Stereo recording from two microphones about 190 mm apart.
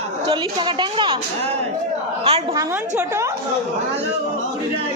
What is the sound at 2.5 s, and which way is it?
Speech, 15° right (ahead or behind).